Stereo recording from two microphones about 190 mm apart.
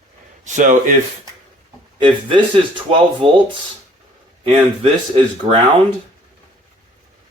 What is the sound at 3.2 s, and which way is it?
Speech, 30° right (ahead or behind).